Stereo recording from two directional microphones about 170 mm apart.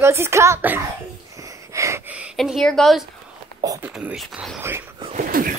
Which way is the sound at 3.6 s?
20° right (ahead or behind).